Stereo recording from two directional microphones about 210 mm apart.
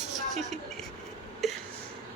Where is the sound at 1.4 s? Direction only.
Centre (ahead or behind).